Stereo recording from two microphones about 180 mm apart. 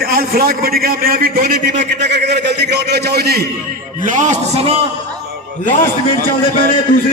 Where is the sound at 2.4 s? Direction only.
70° right (ahead or behind).